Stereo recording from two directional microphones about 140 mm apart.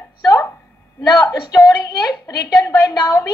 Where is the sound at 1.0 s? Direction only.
25° left (ahead or behind).